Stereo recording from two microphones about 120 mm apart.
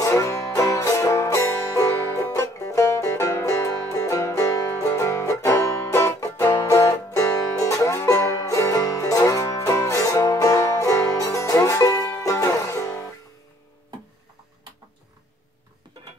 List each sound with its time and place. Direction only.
0.0 s music: 25° left (ahead or behind)